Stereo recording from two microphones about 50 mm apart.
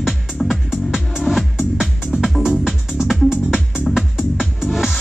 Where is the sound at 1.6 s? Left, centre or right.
Centre.